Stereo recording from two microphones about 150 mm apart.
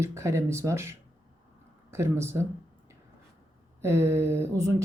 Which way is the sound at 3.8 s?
20° right (ahead or behind).